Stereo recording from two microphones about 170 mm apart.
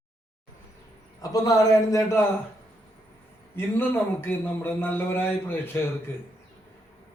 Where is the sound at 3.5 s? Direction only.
10° left (ahead or behind).